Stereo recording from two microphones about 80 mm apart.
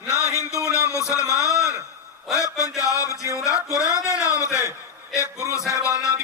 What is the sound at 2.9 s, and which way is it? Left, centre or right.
A man's voice, left.